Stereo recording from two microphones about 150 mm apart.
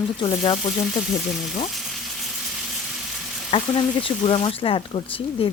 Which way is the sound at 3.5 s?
35° left (ahead or behind).